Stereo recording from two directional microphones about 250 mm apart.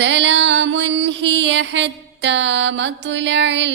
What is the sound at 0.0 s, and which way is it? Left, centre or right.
Music, right.